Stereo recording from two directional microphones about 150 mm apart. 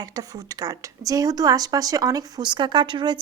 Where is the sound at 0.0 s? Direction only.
25° right (ahead or behind).